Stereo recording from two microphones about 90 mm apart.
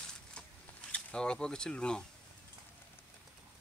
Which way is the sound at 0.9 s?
10° left (ahead or behind).